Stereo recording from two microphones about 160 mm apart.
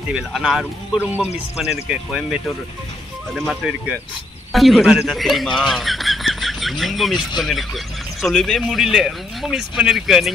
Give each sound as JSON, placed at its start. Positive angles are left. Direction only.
{"t": 0.1, "sound": "speech", "side_deg": -5}